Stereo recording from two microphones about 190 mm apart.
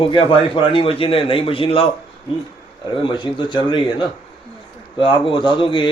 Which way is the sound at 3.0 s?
25° left (ahead or behind).